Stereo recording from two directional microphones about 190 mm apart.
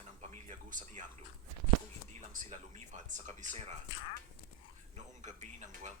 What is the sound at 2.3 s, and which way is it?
Speech, 40° right (ahead or behind).